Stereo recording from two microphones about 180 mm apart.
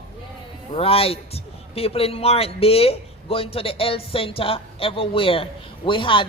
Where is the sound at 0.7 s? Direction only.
30° left (ahead or behind).